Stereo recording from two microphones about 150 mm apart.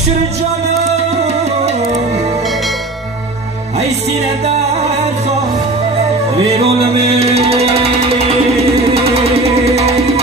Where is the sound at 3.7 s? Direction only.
45° right (ahead or behind).